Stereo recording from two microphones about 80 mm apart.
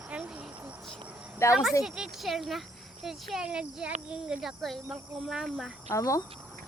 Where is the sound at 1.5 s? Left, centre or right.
Centre.